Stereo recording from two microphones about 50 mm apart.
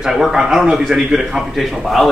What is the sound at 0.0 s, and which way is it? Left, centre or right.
A man's voice, centre.